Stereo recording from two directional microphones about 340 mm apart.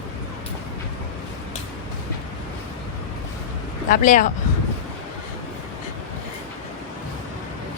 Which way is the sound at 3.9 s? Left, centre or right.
Left.